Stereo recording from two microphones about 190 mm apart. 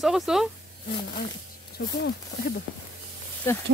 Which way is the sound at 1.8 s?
60° left (ahead or behind).